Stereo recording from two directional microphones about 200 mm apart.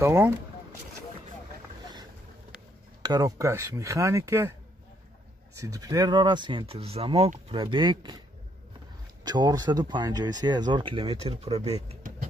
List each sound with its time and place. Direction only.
0.0 s speech: 15° right (ahead or behind)
3.0 s speech: 20° right (ahead or behind)
5.6 s speech: 15° right (ahead or behind)
9.2 s speech: 20° right (ahead or behind); by 12.3 s 35° right (ahead or behind)